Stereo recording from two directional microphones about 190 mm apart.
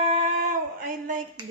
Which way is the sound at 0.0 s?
30° right (ahead or behind).